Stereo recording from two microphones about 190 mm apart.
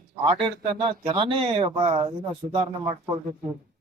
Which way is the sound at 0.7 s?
25° right (ahead or behind).